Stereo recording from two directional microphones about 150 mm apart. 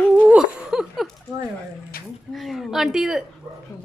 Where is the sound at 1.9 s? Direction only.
80° left.